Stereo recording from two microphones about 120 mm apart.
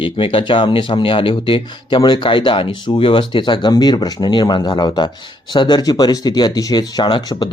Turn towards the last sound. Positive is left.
turn(degrees=40)  # may be behind; listen again after turning